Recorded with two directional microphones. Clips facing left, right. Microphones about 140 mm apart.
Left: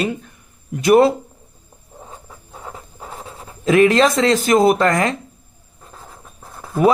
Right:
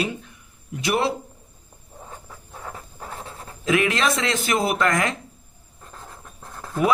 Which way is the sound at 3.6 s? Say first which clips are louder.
Left 8 dB; 35° left (ahead or behind).